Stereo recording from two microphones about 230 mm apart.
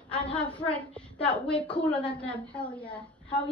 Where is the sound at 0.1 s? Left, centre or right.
Centre.